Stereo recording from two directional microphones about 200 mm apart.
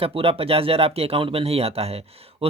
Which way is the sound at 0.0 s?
30° right (ahead or behind).